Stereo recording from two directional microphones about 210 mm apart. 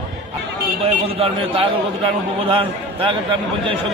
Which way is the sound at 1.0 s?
30° right (ahead or behind).